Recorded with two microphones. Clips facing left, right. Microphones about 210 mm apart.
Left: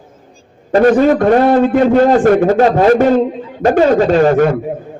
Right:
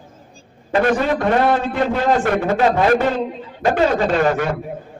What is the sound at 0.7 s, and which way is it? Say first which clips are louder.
A man's voice: left 8 dB; 40° left (ahead or behind).